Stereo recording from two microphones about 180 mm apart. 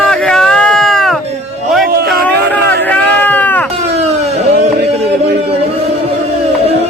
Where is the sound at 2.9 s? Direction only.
10° left (ahead or behind).